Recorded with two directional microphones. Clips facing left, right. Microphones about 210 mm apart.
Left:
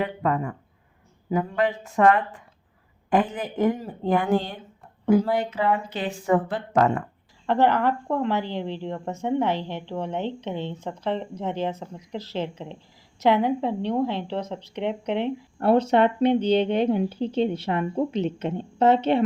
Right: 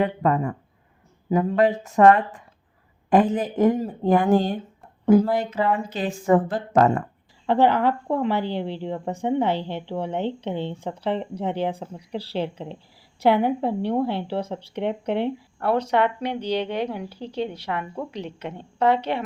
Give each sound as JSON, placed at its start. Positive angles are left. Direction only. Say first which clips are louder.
{"t": 0.0, "sound": "speech", "louder": "right 3 dB", "side_deg": -35}
{"t": 7.4, "sound": "a woman's voice", "louder": "right 2 dB", "side_deg": -15}
{"t": 15.0, "sound": "speech", "louder": "right 1 dB", "side_deg": 20}